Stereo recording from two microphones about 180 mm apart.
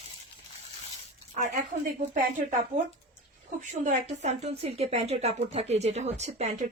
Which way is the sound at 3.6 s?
40° right (ahead or behind).